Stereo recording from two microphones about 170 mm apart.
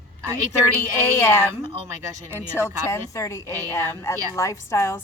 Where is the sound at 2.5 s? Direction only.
20° left (ahead or behind).